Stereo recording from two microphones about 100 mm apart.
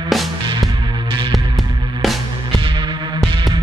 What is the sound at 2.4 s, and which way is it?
Throbbing, 55° right (ahead or behind).